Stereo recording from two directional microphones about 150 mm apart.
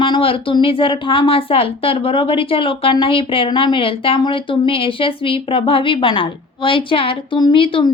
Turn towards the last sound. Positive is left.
turn(degrees=35)  # may be behind; listen again after turning